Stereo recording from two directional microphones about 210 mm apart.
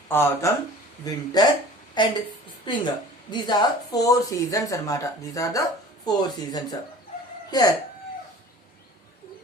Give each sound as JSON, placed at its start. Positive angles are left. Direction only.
{"t": 0.1, "sound": "speech", "side_deg": 10}